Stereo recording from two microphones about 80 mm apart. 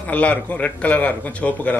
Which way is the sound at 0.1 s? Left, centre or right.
Centre.